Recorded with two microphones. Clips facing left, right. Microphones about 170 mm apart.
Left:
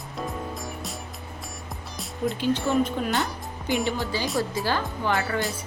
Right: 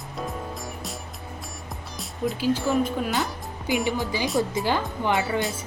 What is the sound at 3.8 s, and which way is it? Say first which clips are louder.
Speech: right 1 dB; 20° right (ahead or behind).